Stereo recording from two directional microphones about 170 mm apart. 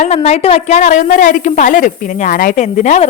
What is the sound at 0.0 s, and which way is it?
A woman's voice, 35° left (ahead or behind).